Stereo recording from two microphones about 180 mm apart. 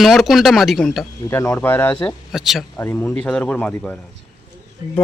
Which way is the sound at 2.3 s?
Centre (ahead or behind).